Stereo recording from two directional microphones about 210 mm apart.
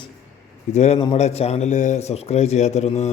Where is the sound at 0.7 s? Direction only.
30° left (ahead or behind).